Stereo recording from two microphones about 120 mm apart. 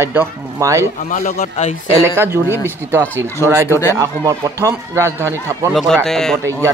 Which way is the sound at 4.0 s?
25° right (ahead or behind).